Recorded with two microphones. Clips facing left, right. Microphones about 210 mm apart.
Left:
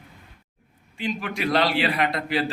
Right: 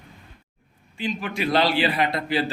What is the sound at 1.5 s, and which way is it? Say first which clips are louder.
Speech: right 1 dB; 25° right (ahead or behind).